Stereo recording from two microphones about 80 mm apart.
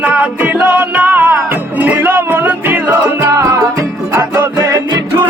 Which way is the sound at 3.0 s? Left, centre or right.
Right.